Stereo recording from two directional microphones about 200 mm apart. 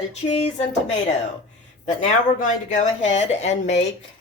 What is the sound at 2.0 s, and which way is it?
Speech, 35° left (ahead or behind).